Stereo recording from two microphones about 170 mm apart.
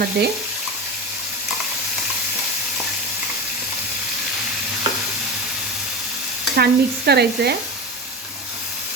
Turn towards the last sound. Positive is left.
turn(degrees=-70)  # may be behind; listen again after turning